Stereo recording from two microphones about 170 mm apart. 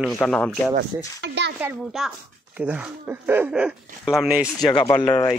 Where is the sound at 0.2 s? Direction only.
5° left (ahead or behind).